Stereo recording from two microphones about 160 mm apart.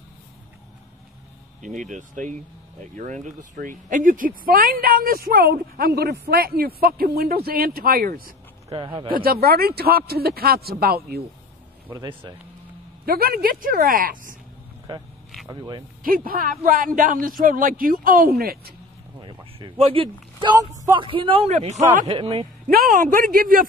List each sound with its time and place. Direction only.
1.6 s speech: 50° right (ahead or behind)
3.5 s speech: 55° right (ahead or behind)
8.6 s speech: 30° right (ahead or behind)
9.1 s speech: 70° right (ahead or behind)
11.9 s speech: 25° right (ahead or behind)
13.0 s speech: 70° right (ahead or behind)
14.9 s speech: 30° right (ahead or behind)
16.0 s speech: 65° right (ahead or behind)
19.2 s speech: 30° right (ahead or behind)
22.7 s speech: 65° right (ahead or behind)